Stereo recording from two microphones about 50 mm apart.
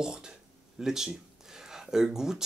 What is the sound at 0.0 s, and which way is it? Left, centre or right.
Speech, centre.